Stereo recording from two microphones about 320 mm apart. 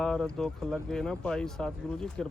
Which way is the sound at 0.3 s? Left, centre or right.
Centre.